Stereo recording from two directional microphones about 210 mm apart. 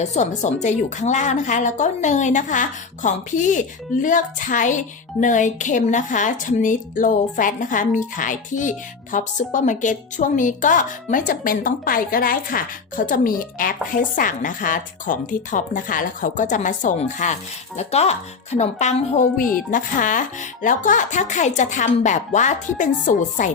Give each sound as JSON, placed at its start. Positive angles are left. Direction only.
{"t": 0.0, "sound": "a woman's voice", "side_deg": 35}